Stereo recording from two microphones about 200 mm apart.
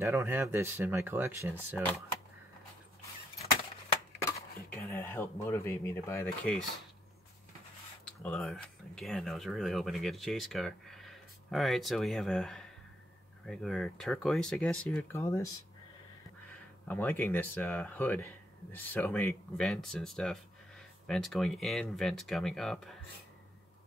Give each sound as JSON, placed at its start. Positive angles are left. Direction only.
{"t": 0.0, "sound": "speech", "side_deg": -15}
{"t": 3.9, "sound": "a sound", "side_deg": 15}
{"t": 4.6, "sound": "speech", "side_deg": 10}
{"t": 8.2, "sound": "speech", "side_deg": 5}
{"t": 16.8, "sound": "speech", "side_deg": 10}